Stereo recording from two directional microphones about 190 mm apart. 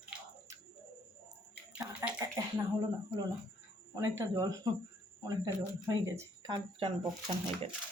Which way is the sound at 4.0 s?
15° right (ahead or behind).